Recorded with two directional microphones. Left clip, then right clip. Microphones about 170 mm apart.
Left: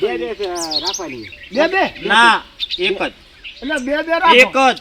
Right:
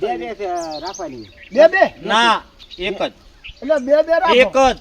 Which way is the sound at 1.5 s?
40° right (ahead or behind).